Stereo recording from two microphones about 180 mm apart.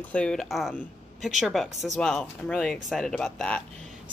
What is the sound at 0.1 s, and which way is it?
Speech, 5° left (ahead or behind).